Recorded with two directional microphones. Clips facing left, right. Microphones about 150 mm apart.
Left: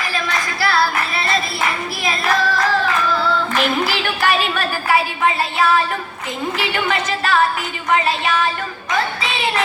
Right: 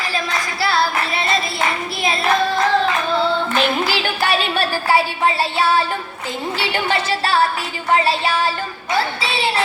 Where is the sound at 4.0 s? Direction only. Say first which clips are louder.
Left 1 dB; 30° right (ahead or behind).